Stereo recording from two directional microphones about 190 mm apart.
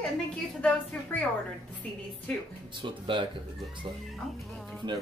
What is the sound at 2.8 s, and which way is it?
Speech, 25° right (ahead or behind).